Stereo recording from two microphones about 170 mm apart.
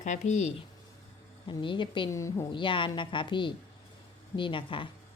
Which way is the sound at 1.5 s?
30° left (ahead or behind).